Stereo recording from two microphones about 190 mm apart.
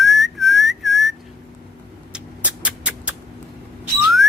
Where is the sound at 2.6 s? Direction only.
5° right (ahead or behind).